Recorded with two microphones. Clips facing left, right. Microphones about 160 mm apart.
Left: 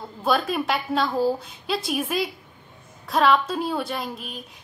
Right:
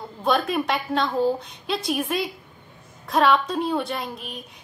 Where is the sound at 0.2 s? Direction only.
Centre (ahead or behind).